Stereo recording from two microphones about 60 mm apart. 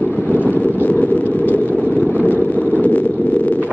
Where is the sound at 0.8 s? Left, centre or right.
Left.